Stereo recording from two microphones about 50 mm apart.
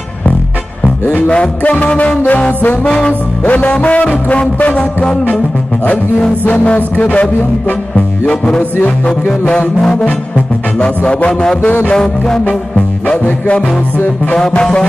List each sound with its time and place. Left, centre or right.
1.3 s music: left
2.8 s music: centre
3.4 s music: left
6.5 s music: left
9.8 s music: centre
11.8 s music: centre
14.3 s music: centre